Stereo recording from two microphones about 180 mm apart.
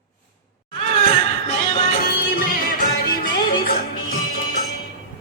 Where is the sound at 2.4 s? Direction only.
50° left (ahead or behind).